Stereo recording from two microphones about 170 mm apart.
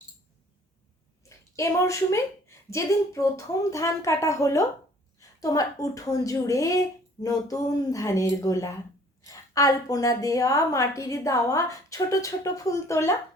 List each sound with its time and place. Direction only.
1.3 s a woman's voice: 20° left (ahead or behind)